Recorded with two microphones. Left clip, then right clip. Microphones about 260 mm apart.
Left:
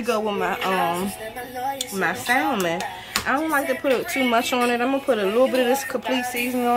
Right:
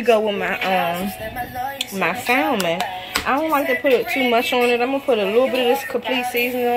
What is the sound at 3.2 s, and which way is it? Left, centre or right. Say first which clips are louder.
Speech: right 3 dB; centre.